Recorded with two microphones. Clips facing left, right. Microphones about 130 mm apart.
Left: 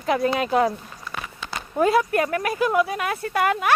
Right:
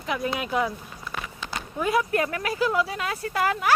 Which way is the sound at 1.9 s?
30° left (ahead or behind).